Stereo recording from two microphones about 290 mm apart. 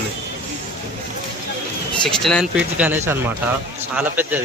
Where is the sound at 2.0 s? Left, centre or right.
Centre.